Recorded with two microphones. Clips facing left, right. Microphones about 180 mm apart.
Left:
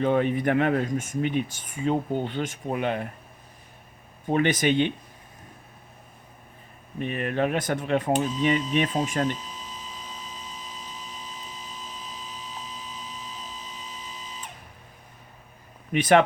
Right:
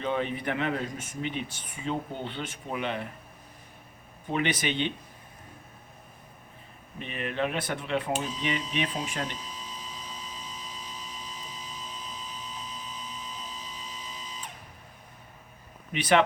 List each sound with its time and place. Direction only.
0.0 s speech: 50° left (ahead or behind)
4.3 s speech: 45° left (ahead or behind)
7.0 s speech: 50° left (ahead or behind)
15.9 s speech: 50° left (ahead or behind)